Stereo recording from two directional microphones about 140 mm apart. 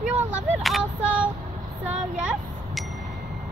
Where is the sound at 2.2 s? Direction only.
5° right (ahead or behind).